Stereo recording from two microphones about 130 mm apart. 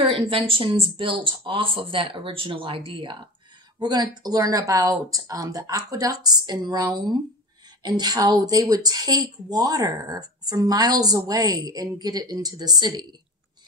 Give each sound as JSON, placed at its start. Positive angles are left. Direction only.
{"t": 0.1, "sound": "speech", "side_deg": -45}